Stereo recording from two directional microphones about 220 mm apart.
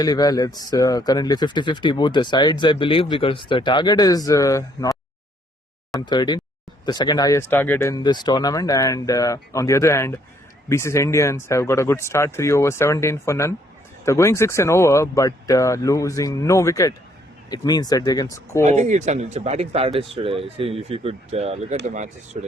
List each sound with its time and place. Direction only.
0.0 s speech: 15° left (ahead or behind)
6.1 s speech: 20° left (ahead or behind)
18.6 s speech: 30° right (ahead or behind)